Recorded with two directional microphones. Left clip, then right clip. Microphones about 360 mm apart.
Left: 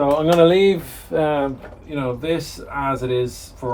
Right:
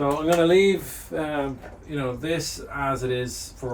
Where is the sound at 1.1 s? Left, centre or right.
Centre.